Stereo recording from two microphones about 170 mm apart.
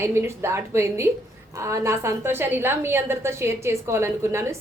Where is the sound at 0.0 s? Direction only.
15° right (ahead or behind).